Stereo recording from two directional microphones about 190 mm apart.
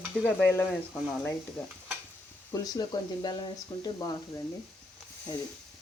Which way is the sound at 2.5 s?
20° left (ahead or behind).